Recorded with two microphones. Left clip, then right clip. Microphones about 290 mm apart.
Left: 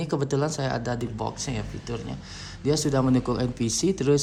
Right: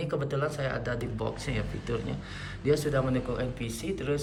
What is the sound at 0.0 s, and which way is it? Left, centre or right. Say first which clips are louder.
Speech: left 4 dB; centre.